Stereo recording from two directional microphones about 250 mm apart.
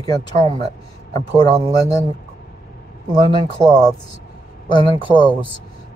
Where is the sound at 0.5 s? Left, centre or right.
Right.